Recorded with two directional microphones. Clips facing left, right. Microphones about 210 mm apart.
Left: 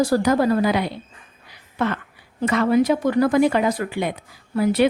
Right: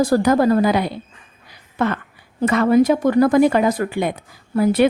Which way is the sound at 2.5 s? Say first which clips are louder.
Right 3 dB; 50° right (ahead or behind).